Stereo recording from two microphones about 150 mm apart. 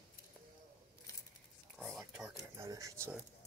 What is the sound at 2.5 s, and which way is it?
Speech, 20° right (ahead or behind).